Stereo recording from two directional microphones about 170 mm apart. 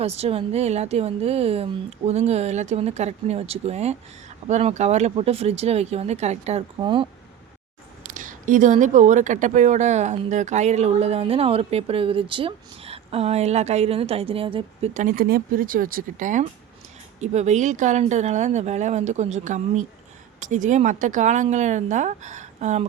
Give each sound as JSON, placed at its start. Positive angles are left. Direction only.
{"t": 0.0, "sound": "speech", "side_deg": -35}
{"t": 6.7, "sound": "speech", "side_deg": -30}
{"t": 8.1, "sound": "speech", "side_deg": -50}
{"t": 14.9, "sound": "speech", "side_deg": -55}